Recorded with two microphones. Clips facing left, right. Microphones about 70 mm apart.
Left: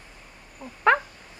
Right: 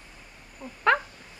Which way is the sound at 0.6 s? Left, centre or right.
Centre.